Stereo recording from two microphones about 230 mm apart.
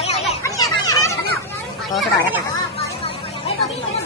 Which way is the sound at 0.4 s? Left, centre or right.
Centre.